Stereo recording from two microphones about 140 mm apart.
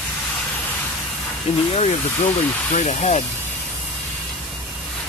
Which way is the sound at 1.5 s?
50° left (ahead or behind).